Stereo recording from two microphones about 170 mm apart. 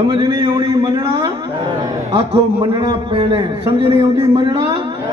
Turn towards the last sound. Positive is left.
turn(degrees=-30)  # may be behind; listen again after turning